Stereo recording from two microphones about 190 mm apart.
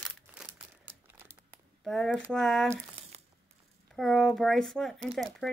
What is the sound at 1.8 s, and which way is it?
Speech, centre (ahead or behind).